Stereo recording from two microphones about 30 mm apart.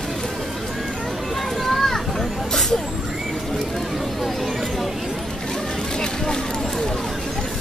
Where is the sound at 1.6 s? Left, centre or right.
Centre.